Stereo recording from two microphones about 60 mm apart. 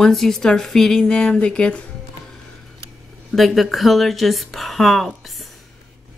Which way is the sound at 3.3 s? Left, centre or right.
Centre.